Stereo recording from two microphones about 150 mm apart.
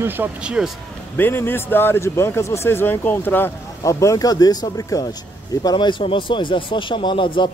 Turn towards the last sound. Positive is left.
turn(degrees=30)  # may be behind; listen again after turning